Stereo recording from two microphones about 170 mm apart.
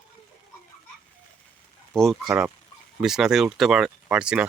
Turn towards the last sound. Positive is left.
turn(degrees=-5)  # may be behind; listen again after turning